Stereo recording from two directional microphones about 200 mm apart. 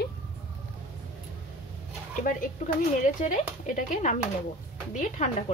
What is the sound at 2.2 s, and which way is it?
Speech, 45° left (ahead or behind).